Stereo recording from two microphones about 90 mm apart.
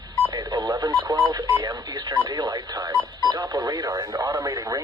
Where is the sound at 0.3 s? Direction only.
55° right (ahead or behind).